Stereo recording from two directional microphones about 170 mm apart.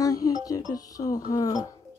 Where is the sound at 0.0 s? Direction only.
20° left (ahead or behind).